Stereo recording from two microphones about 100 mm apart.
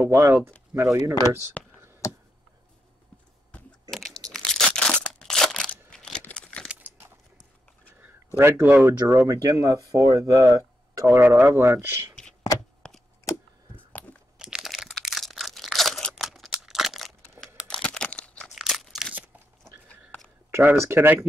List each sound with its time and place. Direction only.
0.0 s speech: 25° right (ahead or behind)
1.6 s a sound: 15° left (ahead or behind)
3.9 s crunch: 5° left (ahead or behind)
4.6 s a sound: 10° left (ahead or behind)
6.2 s crumpling: 10° left (ahead or behind)
6.7 s a sound: 15° right (ahead or behind)
8.4 s speech: 25° right (ahead or behind)
11.1 s speech: 20° right (ahead or behind)
12.8 s a sound: 10° left (ahead or behind)
14.4 s crunch: 5° right (ahead or behind)
17.6 s crumpling: 10° left (ahead or behind)
18.5 s crunch: centre (ahead or behind)
20.5 s speech: 25° right (ahead or behind)